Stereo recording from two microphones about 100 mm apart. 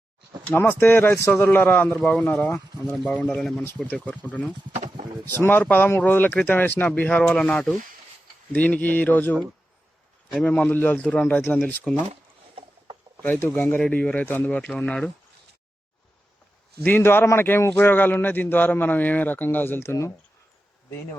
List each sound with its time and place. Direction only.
0.4 s a man's voice: 20° left (ahead or behind)
2.0 s a man's voice: 10° left (ahead or behind)
3.8 s a man's voice: 15° left (ahead or behind)
13.2 s a man's voice: 20° left (ahead or behind)
16.8 s a man's voice: 20° left (ahead or behind)